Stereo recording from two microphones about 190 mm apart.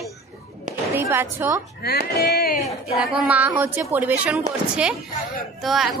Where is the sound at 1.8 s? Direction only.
55° left (ahead or behind).